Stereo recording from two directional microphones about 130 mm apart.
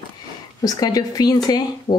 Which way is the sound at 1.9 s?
45° left (ahead or behind).